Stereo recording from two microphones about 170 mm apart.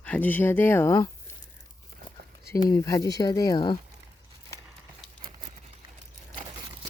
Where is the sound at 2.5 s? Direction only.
20° left (ahead or behind).